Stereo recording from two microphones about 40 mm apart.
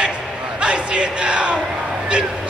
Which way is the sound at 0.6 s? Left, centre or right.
Right.